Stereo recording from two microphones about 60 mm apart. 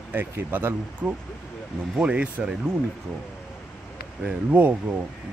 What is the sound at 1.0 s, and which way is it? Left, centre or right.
Speech, centre.